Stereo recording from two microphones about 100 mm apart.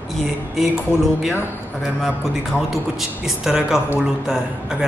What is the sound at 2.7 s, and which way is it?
A man's voice, 5° right (ahead or behind).